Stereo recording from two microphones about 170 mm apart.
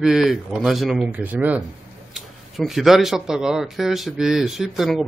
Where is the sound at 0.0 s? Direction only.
Centre (ahead or behind).